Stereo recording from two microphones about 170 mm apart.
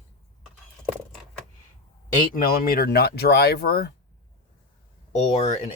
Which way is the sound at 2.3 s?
60° left (ahead or behind).